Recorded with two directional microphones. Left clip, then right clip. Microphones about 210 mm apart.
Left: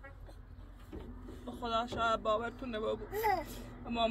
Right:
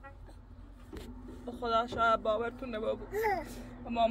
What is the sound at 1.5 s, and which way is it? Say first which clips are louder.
Speech: right 4 dB; 10° right (ahead or behind).